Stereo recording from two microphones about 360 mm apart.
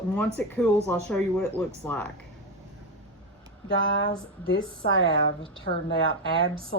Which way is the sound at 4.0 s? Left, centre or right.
Left.